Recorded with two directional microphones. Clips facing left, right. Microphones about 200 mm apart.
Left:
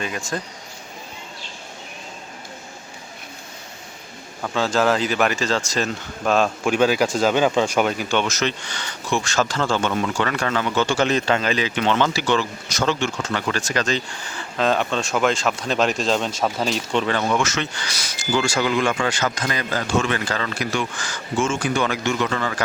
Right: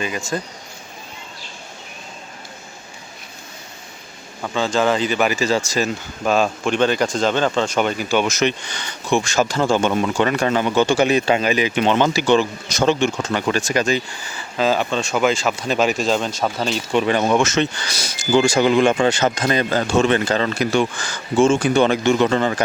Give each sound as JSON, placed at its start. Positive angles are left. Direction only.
{"t": 0.0, "sound": "speech", "side_deg": 0}
{"t": 4.4, "sound": "speech", "side_deg": 0}
{"t": 16.9, "sound": "speech", "side_deg": -15}